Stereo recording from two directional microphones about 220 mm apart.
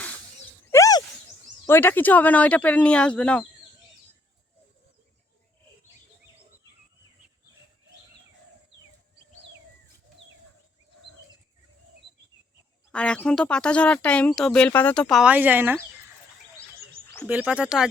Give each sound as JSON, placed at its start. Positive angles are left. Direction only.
{"t": 0.7, "sound": "a sound", "side_deg": 15}
{"t": 1.6, "sound": "speech", "side_deg": 10}
{"t": 12.9, "sound": "speech", "side_deg": 5}
{"t": 17.2, "sound": "speech", "side_deg": -5}